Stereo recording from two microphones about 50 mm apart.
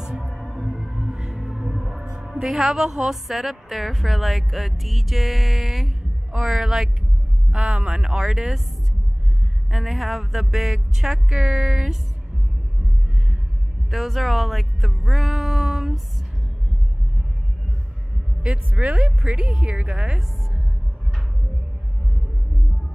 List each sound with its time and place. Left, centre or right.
0.0 s music: centre
2.4 s a woman's voice: centre
7.5 s a woman's voice: centre
8.1 s a woman's voice: centre
9.7 s a woman's voice: centre
13.8 s speech: centre
18.7 s a woman's voice: right
19.2 s a woman's voice: centre